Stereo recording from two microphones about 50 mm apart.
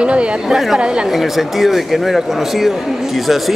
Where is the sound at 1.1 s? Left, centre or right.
Centre.